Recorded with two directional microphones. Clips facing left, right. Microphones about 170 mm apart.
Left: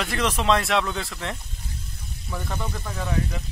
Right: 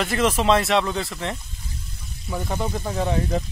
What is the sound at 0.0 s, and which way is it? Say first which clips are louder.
A man's voice: right 4 dB; centre (ahead or behind).